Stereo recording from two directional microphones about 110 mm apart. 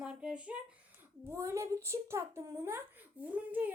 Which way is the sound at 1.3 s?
25° right (ahead or behind).